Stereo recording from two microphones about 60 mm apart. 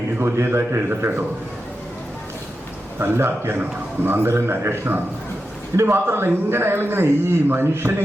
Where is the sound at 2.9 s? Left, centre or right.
Right.